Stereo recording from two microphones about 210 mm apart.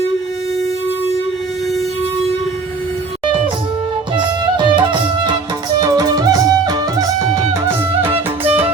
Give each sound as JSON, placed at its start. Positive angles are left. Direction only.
{"t": 3.2, "sound": "music", "side_deg": -25}
{"t": 8.0, "sound": "music", "side_deg": -25}